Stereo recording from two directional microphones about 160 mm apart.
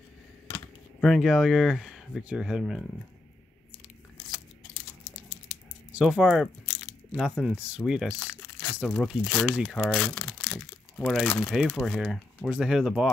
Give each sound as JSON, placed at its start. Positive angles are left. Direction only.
{"t": 1.0, "sound": "speech", "side_deg": 0}
{"t": 5.5, "sound": "squish", "side_deg": -5}
{"t": 7.2, "sound": "speech", "side_deg": -5}